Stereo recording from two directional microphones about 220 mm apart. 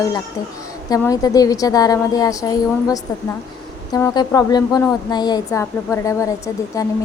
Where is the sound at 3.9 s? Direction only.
15° left (ahead or behind).